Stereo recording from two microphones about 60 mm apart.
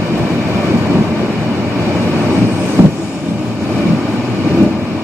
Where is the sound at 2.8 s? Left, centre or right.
Right.